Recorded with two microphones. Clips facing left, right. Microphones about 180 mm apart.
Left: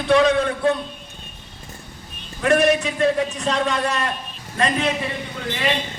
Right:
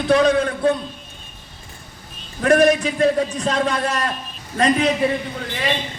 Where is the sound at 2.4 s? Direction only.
35° right (ahead or behind).